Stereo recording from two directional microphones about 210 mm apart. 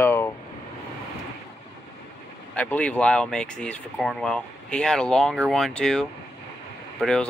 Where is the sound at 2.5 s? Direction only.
5° left (ahead or behind).